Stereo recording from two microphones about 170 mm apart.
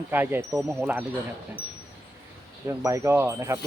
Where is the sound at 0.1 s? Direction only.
10° right (ahead or behind).